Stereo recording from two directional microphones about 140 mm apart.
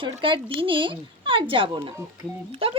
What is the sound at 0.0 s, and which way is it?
Speech, 40° right (ahead or behind).